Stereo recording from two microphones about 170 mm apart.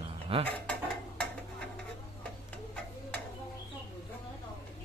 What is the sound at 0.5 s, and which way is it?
Dishes, 10° left (ahead or behind).